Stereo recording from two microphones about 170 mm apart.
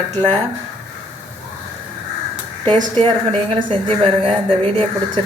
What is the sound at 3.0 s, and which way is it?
A woman's voice, 30° right (ahead or behind).